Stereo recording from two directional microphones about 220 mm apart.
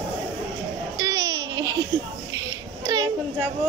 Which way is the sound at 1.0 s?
15° right (ahead or behind).